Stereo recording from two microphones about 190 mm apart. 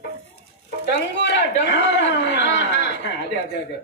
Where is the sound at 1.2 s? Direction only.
65° left (ahead or behind).